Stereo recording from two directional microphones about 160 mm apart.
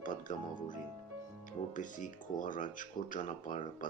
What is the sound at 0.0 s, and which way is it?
Speech, 55° left (ahead or behind).